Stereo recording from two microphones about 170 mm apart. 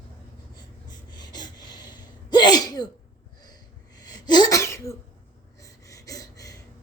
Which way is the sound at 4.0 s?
25° left (ahead or behind).